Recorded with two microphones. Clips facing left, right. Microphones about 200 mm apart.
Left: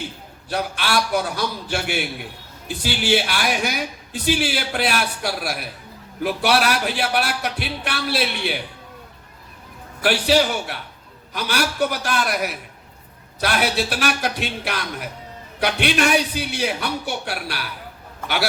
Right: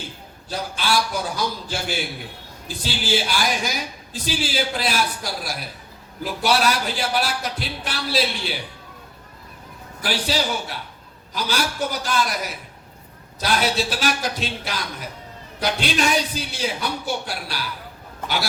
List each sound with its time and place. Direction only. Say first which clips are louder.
0.5 s a man's voice: left 1 dB; 65° left (ahead or behind)
10.0 s a man's voice: left 6 dB; 60° left (ahead or behind)